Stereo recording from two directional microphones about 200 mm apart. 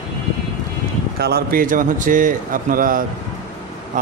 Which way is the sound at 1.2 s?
50° right (ahead or behind).